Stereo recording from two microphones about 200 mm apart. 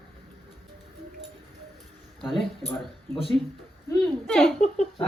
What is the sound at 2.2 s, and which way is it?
Speech, centre (ahead or behind).